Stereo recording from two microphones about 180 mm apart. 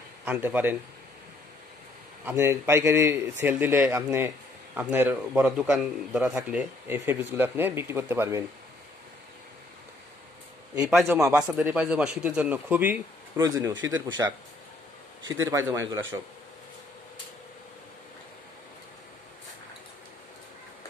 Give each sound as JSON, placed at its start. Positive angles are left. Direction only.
{"t": 0.2, "sound": "speech", "side_deg": -10}
{"t": 2.2, "sound": "a man's voice", "side_deg": -15}
{"t": 10.9, "sound": "a man's voice", "side_deg": 0}
{"t": 15.4, "sound": "a man's voice", "side_deg": -15}